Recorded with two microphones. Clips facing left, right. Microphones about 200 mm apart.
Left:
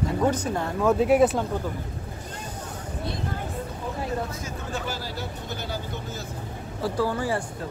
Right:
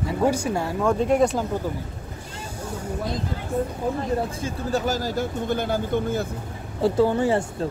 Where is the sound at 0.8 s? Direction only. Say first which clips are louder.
Left 1 dB; 5° left (ahead or behind).